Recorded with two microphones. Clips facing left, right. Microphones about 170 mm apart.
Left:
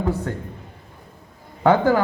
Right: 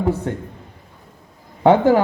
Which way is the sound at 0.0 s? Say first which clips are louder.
Right 3 dB; 20° right (ahead or behind).